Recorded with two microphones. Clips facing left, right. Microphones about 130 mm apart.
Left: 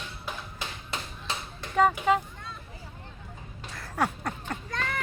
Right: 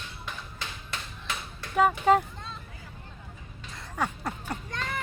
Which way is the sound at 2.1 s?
40° right (ahead or behind).